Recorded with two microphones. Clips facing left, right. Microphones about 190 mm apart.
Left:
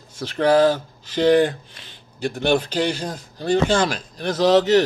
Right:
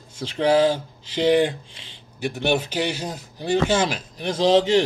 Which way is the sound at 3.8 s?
20° right (ahead or behind).